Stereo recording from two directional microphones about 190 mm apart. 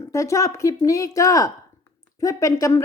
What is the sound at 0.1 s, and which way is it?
Speech, 15° left (ahead or behind).